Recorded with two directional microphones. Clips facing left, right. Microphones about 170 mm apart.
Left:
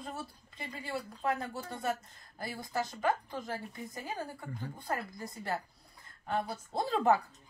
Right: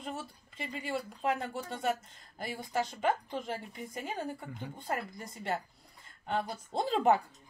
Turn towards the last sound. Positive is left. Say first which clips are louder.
# right 1 dB
turn(degrees=-20)  # may be behind; listen again after turning